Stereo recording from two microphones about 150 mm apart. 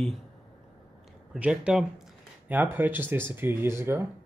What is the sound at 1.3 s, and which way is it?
Speech, 10° right (ahead or behind).